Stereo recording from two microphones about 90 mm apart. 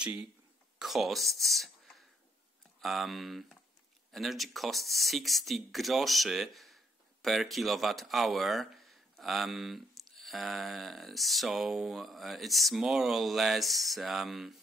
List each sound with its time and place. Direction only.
0.0 s speech: 15° right (ahead or behind)
0.7 s speech: centre (ahead or behind)